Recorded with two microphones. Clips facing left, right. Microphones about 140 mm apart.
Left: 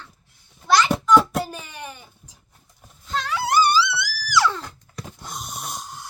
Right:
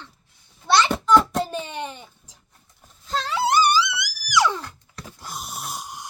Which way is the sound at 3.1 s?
30° right (ahead or behind).